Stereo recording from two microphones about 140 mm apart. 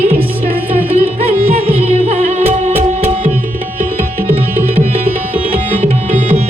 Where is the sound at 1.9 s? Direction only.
50° right (ahead or behind).